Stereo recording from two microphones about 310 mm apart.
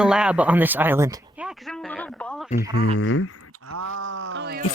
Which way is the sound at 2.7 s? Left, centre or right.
Left.